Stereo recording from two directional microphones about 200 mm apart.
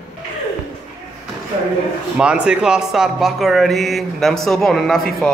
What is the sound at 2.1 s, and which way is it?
Speech, 5° right (ahead or behind).